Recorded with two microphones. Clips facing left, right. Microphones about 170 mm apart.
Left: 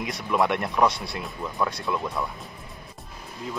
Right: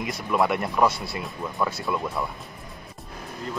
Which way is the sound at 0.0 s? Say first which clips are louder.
Even; centre (ahead or behind).